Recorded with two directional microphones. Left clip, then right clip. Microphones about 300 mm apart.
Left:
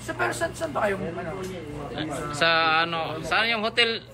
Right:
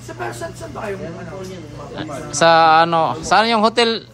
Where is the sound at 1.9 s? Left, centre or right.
Centre.